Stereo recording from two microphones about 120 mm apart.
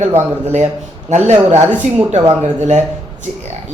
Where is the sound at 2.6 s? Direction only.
75° right (ahead or behind).